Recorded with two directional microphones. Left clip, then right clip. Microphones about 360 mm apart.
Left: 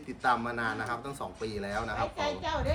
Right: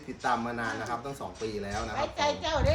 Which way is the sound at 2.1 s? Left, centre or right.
Right.